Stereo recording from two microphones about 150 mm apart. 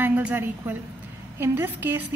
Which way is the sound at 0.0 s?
10° right (ahead or behind).